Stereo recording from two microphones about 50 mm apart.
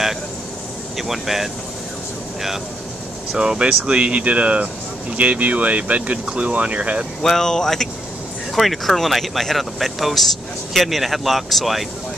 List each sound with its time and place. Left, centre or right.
0.9 s speech: centre
3.3 s speech: centre
7.2 s speech: centre